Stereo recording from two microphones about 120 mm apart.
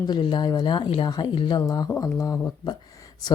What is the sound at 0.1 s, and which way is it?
A woman's voice, 40° left (ahead or behind).